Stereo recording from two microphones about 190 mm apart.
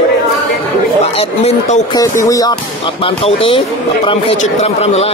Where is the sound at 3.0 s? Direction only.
30° left (ahead or behind).